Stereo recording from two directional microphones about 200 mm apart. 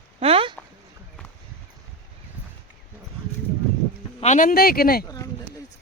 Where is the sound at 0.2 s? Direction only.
30° right (ahead or behind).